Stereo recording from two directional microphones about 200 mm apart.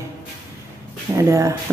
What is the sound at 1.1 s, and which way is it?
Speech, 15° right (ahead or behind).